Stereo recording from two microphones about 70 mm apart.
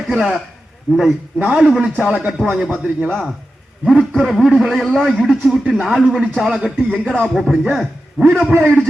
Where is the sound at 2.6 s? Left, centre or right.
Right.